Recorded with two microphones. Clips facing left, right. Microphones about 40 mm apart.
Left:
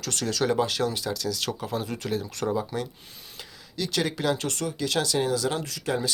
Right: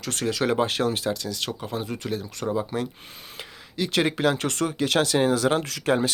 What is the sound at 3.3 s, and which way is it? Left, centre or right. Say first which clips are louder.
Speech: right 3 dB; right.